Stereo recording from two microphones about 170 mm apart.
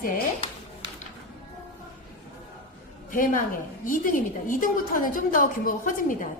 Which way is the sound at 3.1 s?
50° left (ahead or behind).